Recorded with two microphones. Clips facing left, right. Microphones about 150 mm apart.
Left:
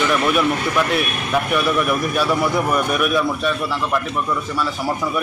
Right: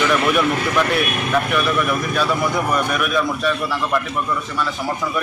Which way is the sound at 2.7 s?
5° left (ahead or behind).